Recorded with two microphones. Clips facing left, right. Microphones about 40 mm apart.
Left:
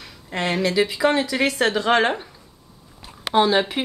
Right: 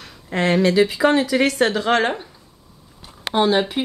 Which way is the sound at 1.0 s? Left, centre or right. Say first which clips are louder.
Right 1 dB; centre.